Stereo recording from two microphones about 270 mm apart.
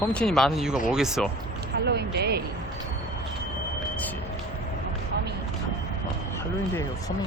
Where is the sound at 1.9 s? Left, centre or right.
Right.